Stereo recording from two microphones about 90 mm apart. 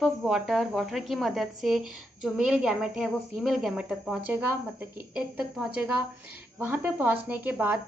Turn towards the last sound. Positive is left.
turn(degrees=-20)  # may be behind; listen again after turning